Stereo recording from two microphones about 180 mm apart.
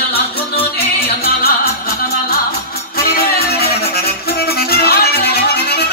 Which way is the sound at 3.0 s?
60° left (ahead or behind).